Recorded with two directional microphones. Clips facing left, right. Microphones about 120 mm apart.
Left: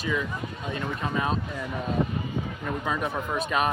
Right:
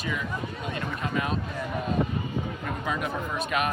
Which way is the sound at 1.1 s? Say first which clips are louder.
Left 1 dB; 30° left (ahead or behind).